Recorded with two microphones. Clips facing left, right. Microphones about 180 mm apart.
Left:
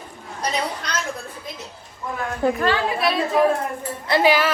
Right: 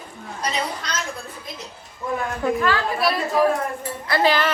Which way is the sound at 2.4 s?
30° left (ahead or behind).